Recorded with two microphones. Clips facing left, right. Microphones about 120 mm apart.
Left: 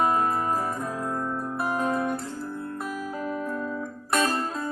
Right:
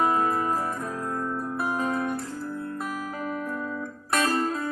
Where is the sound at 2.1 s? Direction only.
25° left (ahead or behind).